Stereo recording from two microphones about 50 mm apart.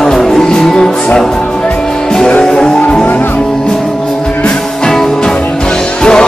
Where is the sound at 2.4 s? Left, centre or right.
Centre.